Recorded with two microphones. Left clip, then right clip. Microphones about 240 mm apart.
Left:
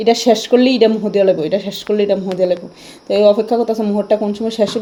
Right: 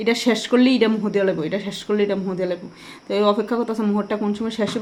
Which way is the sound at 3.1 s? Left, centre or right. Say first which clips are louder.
Left 8 dB; right.